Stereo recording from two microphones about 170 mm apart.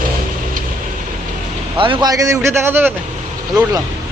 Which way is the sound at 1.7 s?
30° right (ahead or behind).